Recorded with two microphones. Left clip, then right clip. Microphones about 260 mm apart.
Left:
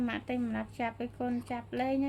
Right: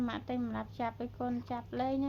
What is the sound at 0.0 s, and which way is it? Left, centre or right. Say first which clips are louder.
A woman's voice: left 2 dB; left.